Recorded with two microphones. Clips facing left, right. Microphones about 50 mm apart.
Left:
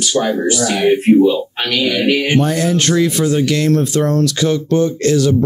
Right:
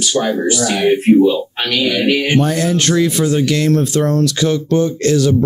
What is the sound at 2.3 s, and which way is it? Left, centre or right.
Speech, centre.